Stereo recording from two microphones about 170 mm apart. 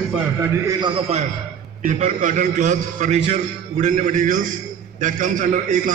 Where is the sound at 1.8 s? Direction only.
45° right (ahead or behind).